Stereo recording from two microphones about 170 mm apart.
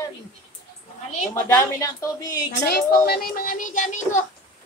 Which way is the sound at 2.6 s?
70° left (ahead or behind).